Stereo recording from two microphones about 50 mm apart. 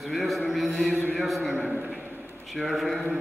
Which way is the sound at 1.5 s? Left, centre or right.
Right.